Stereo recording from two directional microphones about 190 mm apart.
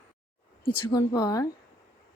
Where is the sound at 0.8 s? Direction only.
20° left (ahead or behind).